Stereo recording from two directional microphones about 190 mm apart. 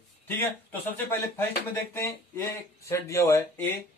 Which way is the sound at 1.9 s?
15° left (ahead or behind).